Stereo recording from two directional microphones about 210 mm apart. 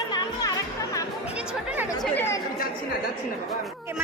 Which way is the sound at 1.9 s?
15° left (ahead or behind).